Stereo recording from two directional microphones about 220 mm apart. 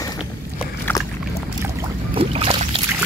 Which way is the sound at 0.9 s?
15° left (ahead or behind).